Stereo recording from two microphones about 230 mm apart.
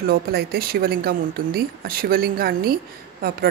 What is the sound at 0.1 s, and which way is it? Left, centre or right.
Speech, right.